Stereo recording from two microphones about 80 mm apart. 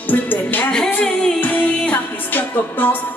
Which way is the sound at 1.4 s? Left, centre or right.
Left.